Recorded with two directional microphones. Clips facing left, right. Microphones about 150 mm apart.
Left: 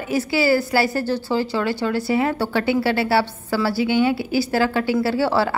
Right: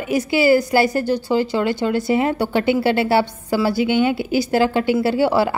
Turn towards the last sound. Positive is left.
turn(degrees=-15)  # may be behind; listen again after turning